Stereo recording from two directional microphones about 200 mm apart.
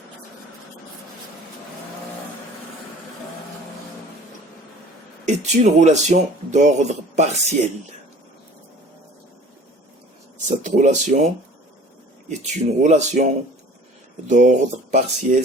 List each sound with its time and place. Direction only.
5.2 s speech: 35° right (ahead or behind)
10.6 s speech: 40° right (ahead or behind)
12.3 s speech: 35° right (ahead or behind)
14.3 s speech: 35° right (ahead or behind)